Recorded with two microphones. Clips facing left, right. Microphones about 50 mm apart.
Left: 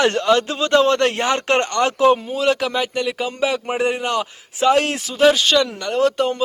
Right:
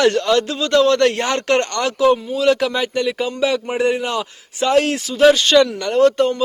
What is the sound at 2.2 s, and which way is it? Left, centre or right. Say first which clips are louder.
Speech: right 2 dB; left.